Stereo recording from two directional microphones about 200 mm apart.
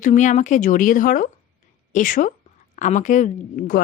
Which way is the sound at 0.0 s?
35° left (ahead or behind).